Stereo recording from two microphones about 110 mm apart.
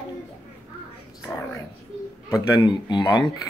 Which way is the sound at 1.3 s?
15° left (ahead or behind).